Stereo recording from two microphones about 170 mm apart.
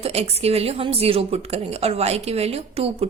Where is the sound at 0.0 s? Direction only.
40° right (ahead or behind).